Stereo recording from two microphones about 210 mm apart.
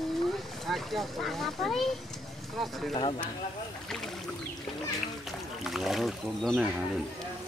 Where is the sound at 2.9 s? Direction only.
25° left (ahead or behind).